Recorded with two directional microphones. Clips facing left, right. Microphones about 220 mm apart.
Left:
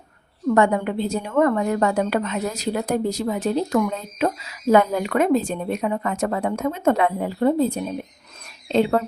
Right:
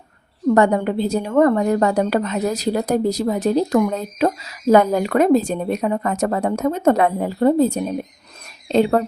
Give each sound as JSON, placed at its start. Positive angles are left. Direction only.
{"t": 0.4, "sound": "a woman's voice", "side_deg": -35}